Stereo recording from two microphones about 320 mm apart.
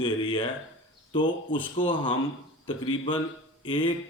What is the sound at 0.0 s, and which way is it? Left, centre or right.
Speech, centre.